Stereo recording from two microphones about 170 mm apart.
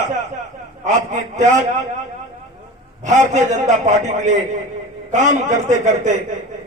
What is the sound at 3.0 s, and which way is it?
A man's voice, 45° right (ahead or behind).